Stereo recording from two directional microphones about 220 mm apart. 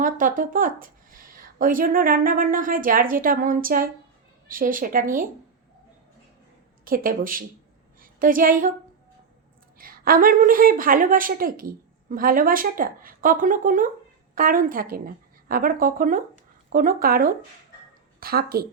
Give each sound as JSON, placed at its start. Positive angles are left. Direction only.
{"t": 0.0, "sound": "a woman's voice", "side_deg": -40}
{"t": 6.8, "sound": "a woman's voice", "side_deg": -40}
{"t": 9.7, "sound": "a woman's voice", "side_deg": -40}